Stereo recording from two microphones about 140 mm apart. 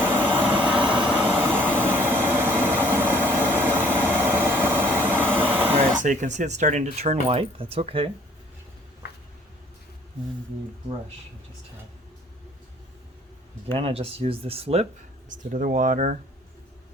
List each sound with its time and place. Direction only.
0.0 s vehicle: 15° right (ahead or behind)
6.0 s speech: 60° right (ahead or behind); by 8.1 s 45° right (ahead or behind)
13.7 s speech: 45° right (ahead or behind)
15.4 s speech: 75° right (ahead or behind)